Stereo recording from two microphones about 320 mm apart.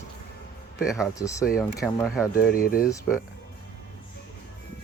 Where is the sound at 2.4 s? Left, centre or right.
Left.